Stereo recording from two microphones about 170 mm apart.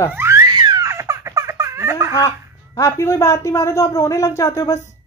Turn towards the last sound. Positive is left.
turn(degrees=15)  # may be behind; listen again after turning